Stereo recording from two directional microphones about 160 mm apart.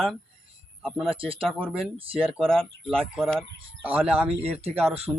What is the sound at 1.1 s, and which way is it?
Speech, 35° right (ahead or behind).